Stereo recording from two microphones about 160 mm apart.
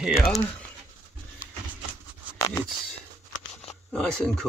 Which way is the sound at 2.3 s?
20° left (ahead or behind).